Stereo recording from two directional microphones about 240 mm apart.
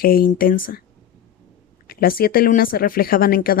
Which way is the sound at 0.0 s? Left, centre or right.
Left.